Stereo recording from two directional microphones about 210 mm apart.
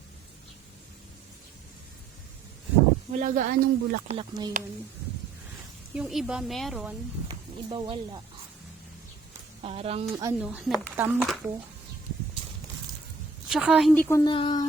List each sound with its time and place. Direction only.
3.1 s speech: 35° right (ahead or behind)
4.2 s speech: 20° right (ahead or behind)
5.9 s speech: 5° right (ahead or behind)
7.3 s speech: 25° right (ahead or behind)
9.6 s speech: 30° right (ahead or behind)
10.4 s speech: 5° right (ahead or behind)
13.5 s speech: centre (ahead or behind)
14.3 s speech: 20° left (ahead or behind)